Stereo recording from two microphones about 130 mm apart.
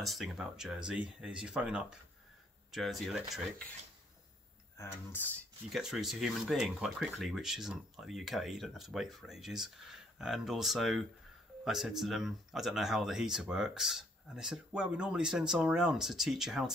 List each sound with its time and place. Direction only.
0.0 s speech: centre (ahead or behind)
4.7 s speech: 15° left (ahead or behind)
5.7 s speech: centre (ahead or behind)